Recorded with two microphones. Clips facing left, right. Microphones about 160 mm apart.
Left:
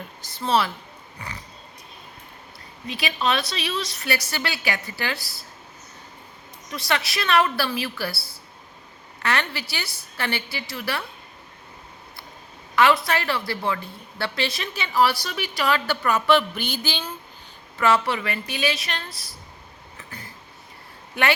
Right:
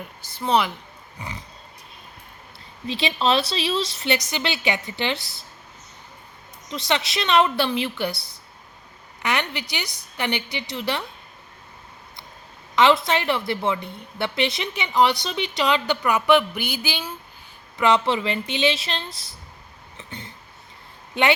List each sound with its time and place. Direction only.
0.3 s a woman's voice: 15° right (ahead or behind)
1.2 s a sound: 20° right (ahead or behind)
2.8 s a woman's voice: 25° right (ahead or behind)
6.7 s a woman's voice: 20° right (ahead or behind)
9.2 s a woman's voice: 15° right (ahead or behind)
12.7 s a woman's voice: 20° right (ahead or behind)
20.0 s a sound: 25° right (ahead or behind)